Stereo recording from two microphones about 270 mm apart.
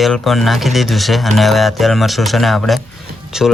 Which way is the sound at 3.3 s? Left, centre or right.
Centre.